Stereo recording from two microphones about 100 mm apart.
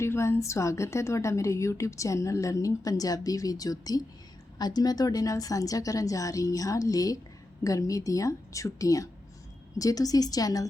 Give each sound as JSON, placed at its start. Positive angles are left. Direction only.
{"t": 0.0, "sound": "a woman's voice", "side_deg": 25}